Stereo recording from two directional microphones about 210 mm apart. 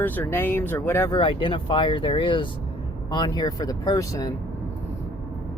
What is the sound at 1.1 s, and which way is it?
Speech, 25° left (ahead or behind).